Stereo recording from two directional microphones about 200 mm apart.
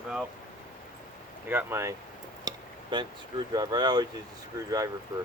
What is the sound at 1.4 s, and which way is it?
Speech, 10° right (ahead or behind).